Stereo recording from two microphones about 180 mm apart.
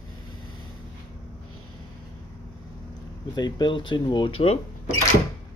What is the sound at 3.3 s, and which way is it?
Speech, 25° left (ahead or behind).